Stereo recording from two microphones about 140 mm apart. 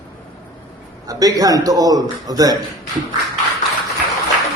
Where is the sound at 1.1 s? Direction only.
25° right (ahead or behind).